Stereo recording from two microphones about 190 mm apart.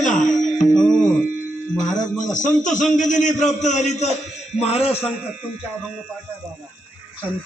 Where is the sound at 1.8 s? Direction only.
40° left (ahead or behind).